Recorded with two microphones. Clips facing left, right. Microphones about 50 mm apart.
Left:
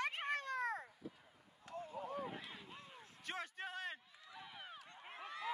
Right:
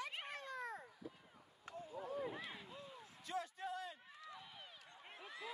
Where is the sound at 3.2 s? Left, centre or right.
Left.